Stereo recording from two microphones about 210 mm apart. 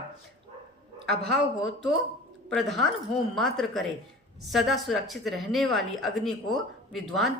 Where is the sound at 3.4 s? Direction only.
Centre (ahead or behind).